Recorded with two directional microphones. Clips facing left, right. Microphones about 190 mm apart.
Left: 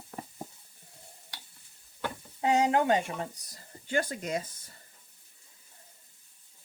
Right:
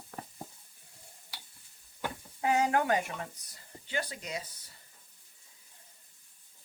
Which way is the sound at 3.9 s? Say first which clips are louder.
Left 6 dB; 50° left (ahead or behind).